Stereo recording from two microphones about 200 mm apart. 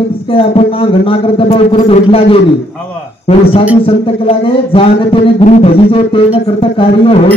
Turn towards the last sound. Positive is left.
turn(degrees=25)  # may be behind; listen again after turning